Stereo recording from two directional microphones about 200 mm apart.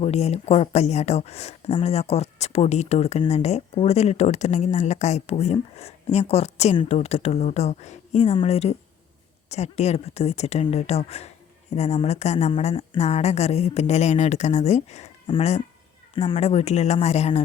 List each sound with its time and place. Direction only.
0.0 s speech: 30° left (ahead or behind)